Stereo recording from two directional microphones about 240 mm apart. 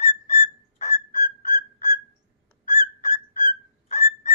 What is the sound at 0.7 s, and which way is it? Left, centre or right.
Whistle, left.